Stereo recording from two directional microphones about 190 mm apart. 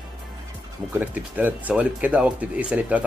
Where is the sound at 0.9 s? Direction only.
10° right (ahead or behind).